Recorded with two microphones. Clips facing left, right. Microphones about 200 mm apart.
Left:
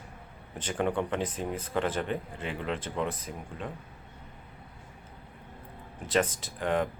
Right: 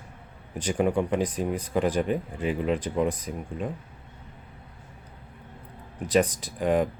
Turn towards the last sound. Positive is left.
turn(degrees=-15)  # may be behind; listen again after turning